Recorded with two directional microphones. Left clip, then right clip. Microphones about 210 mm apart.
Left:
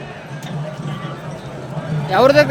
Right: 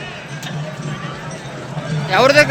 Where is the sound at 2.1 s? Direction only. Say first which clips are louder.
Even; 25° left (ahead or behind).